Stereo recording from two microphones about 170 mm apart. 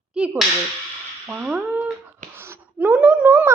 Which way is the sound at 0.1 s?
5° right (ahead or behind).